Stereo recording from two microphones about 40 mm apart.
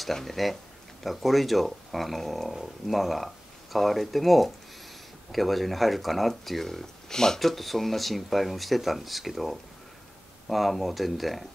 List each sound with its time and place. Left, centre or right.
0.0 s speech: centre
7.3 s speech: centre